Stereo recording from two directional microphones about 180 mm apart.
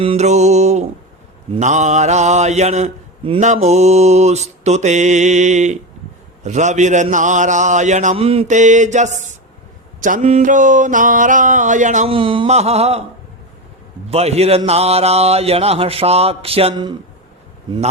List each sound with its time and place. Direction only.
0.0 s mantra: 35° right (ahead or behind)
6.4 s a man's voice: 40° right (ahead or behind)
12.1 s mantra: 30° right (ahead or behind)
14.1 s mantra: 35° right (ahead or behind)